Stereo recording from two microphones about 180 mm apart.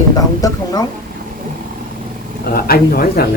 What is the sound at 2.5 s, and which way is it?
Speech, 55° left (ahead or behind).